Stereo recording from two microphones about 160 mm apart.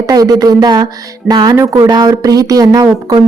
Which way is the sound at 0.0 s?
20° right (ahead or behind).